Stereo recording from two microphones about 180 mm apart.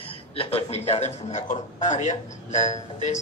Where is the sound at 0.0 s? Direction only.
30° left (ahead or behind).